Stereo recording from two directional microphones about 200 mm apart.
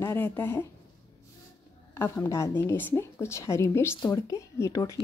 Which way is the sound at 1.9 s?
10° left (ahead or behind).